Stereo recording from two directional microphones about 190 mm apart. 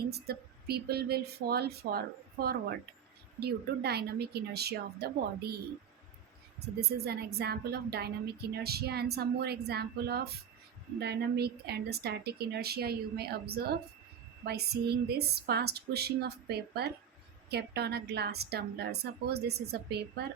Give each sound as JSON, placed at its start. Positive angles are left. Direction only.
{"t": 0.1, "sound": "a woman's voice", "side_deg": -55}
{"t": 6.7, "sound": "a woman's voice", "side_deg": -55}